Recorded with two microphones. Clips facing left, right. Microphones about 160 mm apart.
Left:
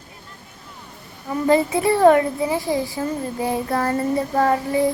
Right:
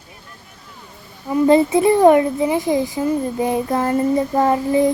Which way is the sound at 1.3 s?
20° right (ahead or behind).